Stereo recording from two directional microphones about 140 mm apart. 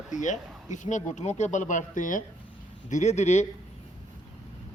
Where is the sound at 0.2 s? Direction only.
60° left (ahead or behind).